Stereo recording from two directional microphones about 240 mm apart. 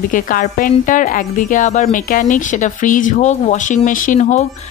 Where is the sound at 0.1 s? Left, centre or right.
Left.